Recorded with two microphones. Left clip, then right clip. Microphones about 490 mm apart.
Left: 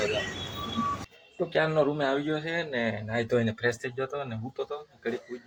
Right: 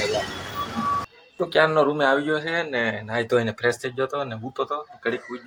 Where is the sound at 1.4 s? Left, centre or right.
Left.